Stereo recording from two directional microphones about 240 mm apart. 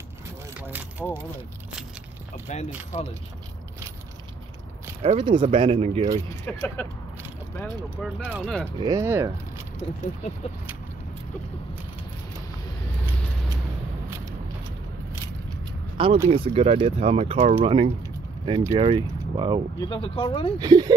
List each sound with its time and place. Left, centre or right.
0.6 s vehicle: centre
2.3 s speech: left
5.0 s speech: right
6.2 s speech: centre
8.2 s speech: centre
16.3 s speech: right
17.6 s a sound: right
18.7 s speech: right
19.8 s speech: left
20.5 s speech: centre